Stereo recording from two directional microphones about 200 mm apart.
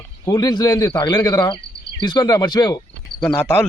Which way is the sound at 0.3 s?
20° left (ahead or behind).